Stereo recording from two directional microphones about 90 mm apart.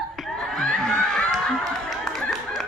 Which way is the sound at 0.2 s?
Centre (ahead or behind).